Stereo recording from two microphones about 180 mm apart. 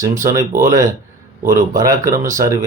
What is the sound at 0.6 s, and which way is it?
Speech, 15° right (ahead or behind).